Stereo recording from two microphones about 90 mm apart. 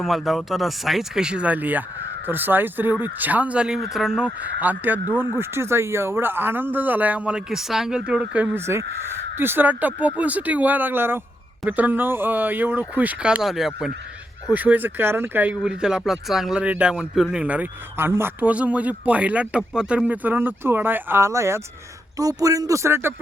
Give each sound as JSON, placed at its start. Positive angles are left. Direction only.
{"t": 0.0, "sound": "speech", "side_deg": 0}
{"t": 4.6, "sound": "speech", "side_deg": -20}
{"t": 8.5, "sound": "speech", "side_deg": -30}
{"t": 14.5, "sound": "speech", "side_deg": -20}
{"t": 15.6, "sound": "speech", "side_deg": -10}
{"t": 22.2, "sound": "a man's voice", "side_deg": -40}